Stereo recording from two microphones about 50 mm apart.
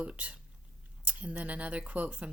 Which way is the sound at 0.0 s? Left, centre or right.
Right.